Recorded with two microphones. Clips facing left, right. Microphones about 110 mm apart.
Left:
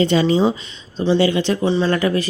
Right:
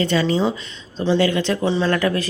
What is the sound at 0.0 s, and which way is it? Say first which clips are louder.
Speech: left 3 dB; 20° left (ahead or behind).